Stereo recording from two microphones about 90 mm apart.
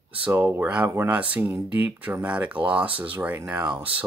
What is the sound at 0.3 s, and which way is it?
Speech, 30° right (ahead or behind).